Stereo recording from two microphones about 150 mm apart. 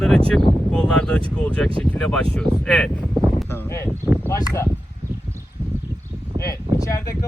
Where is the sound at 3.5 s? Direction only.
15° left (ahead or behind).